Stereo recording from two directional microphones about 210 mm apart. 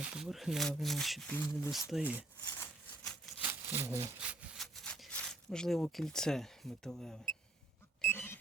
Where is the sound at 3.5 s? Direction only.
10° right (ahead or behind).